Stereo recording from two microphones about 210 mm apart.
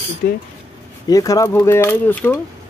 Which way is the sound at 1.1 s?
15° left (ahead or behind).